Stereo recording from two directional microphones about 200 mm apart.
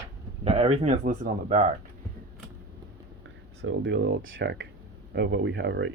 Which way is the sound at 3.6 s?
60° right (ahead or behind).